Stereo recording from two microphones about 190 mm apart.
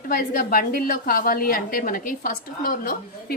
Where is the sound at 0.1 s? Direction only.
50° left (ahead or behind).